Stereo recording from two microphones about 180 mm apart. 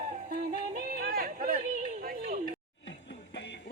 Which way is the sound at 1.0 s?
50° right (ahead or behind).